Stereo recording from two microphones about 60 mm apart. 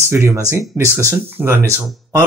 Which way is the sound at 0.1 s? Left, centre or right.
Right.